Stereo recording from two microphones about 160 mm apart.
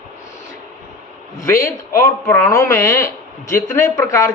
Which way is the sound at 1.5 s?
20° left (ahead or behind).